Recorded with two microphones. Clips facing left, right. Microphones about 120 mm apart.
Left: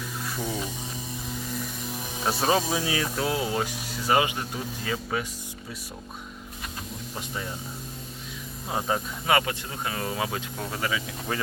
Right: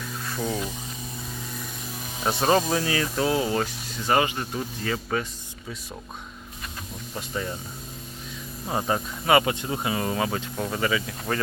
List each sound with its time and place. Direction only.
0.3 s a sound: 5° left (ahead or behind)
2.2 s speech: 5° left (ahead or behind)
8.7 s speech: centre (ahead or behind)
9.5 s speech: 20° right (ahead or behind)
9.9 s speech: centre (ahead or behind)